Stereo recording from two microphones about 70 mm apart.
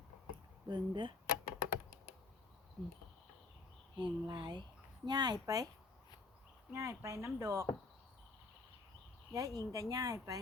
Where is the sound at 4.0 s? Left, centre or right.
Right.